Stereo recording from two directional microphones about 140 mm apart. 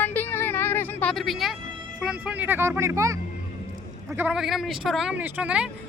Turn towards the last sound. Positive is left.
turn(degrees=-10)  # may be behind; listen again after turning